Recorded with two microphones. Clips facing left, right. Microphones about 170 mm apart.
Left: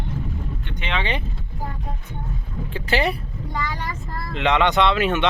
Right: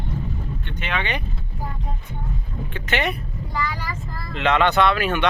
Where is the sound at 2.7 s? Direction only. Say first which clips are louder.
Left 2 dB; 30° left (ahead or behind).